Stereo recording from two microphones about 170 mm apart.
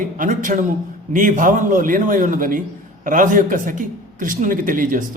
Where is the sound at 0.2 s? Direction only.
50° right (ahead or behind).